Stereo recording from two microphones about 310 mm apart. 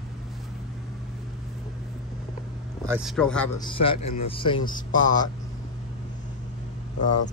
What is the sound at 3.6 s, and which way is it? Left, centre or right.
Speech, centre.